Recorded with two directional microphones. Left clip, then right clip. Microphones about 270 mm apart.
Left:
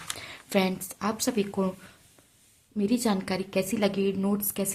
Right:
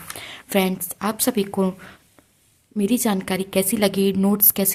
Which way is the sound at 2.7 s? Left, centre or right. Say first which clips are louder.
Right 5 dB; right.